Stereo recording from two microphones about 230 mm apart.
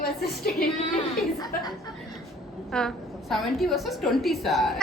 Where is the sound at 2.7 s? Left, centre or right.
Centre.